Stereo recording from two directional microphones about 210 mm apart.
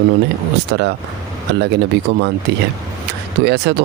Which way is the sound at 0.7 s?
55° right (ahead or behind).